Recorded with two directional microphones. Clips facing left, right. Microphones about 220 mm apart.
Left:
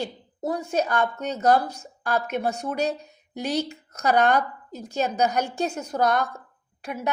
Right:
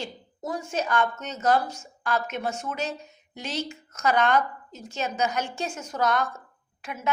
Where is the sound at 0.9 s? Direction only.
35° left (ahead or behind).